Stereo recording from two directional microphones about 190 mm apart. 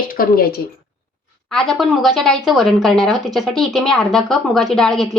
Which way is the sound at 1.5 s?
Centre (ahead or behind).